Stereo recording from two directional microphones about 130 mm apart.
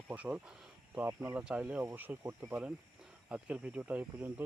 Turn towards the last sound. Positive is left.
turn(degrees=-15)  # may be behind; listen again after turning